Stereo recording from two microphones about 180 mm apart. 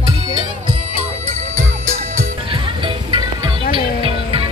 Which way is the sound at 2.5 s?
25° right (ahead or behind).